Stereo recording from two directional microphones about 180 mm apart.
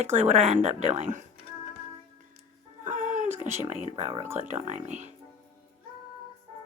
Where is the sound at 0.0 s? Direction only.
35° right (ahead or behind).